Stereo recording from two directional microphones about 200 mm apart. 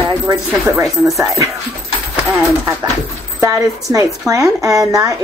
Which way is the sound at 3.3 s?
15° right (ahead or behind).